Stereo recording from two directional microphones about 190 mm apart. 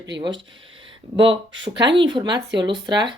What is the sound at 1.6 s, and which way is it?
Speech, 25° right (ahead or behind).